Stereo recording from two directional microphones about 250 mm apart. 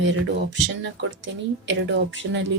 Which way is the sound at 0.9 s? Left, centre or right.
Right.